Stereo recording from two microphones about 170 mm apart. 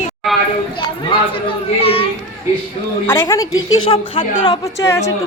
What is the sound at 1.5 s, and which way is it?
Speech, 35° left (ahead or behind).